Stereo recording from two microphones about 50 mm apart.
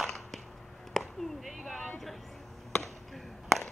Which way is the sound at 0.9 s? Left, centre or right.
Centre.